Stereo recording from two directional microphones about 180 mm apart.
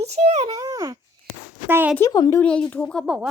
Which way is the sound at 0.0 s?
40° right (ahead or behind).